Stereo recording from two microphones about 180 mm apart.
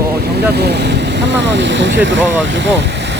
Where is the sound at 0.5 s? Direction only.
65° right (ahead or behind); by 2.7 s 90° right.